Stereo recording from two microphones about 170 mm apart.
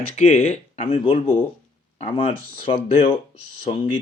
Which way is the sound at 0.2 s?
40° left (ahead or behind).